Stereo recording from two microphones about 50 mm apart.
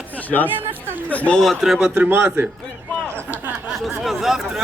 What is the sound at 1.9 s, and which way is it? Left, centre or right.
Speech, right.